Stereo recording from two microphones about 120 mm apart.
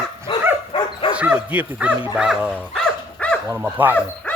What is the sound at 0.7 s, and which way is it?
Bow-wow, 45° left (ahead or behind).